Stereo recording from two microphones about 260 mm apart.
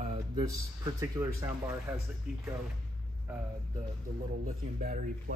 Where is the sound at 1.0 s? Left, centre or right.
Centre.